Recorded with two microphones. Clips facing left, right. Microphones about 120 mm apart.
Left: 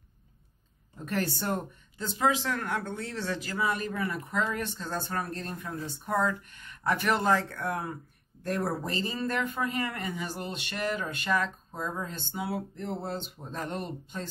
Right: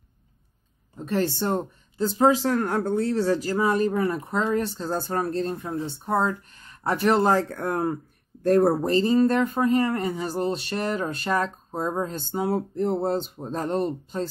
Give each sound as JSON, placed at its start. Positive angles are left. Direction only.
{"t": 0.9, "sound": "speech", "side_deg": -25}